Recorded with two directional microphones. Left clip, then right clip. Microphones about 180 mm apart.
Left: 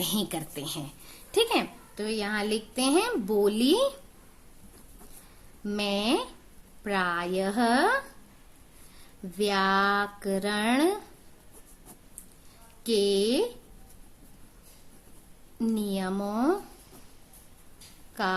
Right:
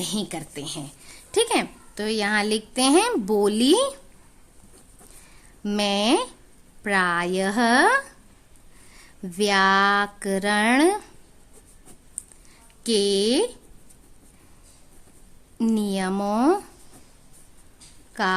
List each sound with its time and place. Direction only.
0.0 s a woman's voice: 20° right (ahead or behind); by 1.6 s 35° right (ahead or behind)
2.0 s a woman's voice: 55° right (ahead or behind)
5.6 s speech: 50° right (ahead or behind)
9.4 s speech: 50° right (ahead or behind)
12.8 s speech: 50° right (ahead or behind)
15.5 s speech: 55° right (ahead or behind)
18.1 s speech: 45° right (ahead or behind)